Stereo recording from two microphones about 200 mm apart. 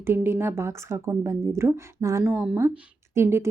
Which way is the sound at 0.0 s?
10° right (ahead or behind).